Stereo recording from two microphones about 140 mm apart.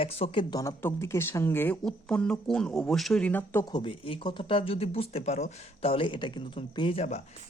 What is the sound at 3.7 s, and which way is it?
Speech, 40° left (ahead or behind).